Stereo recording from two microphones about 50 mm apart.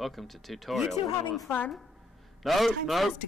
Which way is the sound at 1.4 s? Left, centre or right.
Left.